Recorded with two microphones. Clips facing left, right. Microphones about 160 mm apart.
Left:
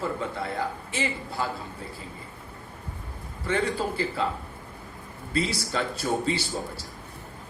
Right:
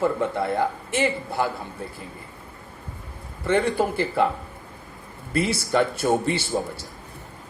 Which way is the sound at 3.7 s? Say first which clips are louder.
Right 6 dB; 60° right (ahead or behind).